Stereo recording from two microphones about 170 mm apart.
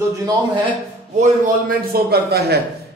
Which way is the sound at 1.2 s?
55° right (ahead or behind).